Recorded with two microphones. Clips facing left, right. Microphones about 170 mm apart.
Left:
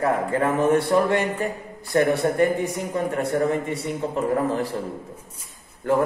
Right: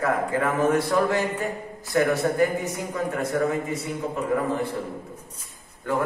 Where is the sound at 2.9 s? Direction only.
30° left (ahead or behind).